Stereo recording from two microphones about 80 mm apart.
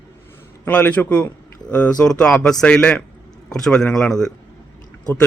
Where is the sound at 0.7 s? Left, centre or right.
Centre.